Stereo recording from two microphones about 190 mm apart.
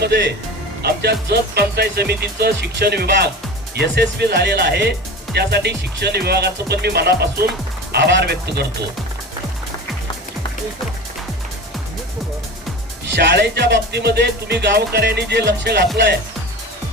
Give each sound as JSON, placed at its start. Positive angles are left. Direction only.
{"t": 0.0, "sound": "speech", "side_deg": -60}
{"t": 13.1, "sound": "speech", "side_deg": -60}